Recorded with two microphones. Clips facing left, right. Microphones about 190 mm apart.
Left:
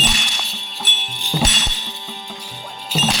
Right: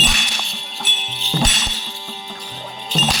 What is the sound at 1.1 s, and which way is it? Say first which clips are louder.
Music: even; 15° left (ahead or behind).